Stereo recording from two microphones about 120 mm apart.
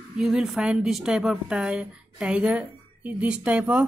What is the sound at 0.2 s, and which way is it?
A woman's voice, centre (ahead or behind).